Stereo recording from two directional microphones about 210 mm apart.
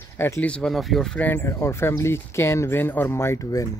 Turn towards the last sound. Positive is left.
turn(degrees=15)  # may be behind; listen again after turning